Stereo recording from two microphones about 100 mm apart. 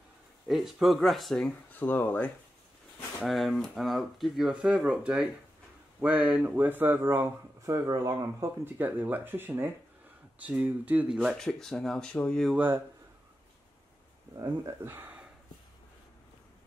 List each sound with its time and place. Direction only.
0.5 s speech: centre (ahead or behind)
1.7 s speech: 20° left (ahead or behind)
3.3 s speech: centre (ahead or behind); by 8.5 s 35° right (ahead or behind)
8.6 s speech: 20° right (ahead or behind)
11.1 s speech: 5° left (ahead or behind)
12.5 s speech: 20° right (ahead or behind)
14.3 s speech: 45° right (ahead or behind)
14.7 s speech: 20° right (ahead or behind)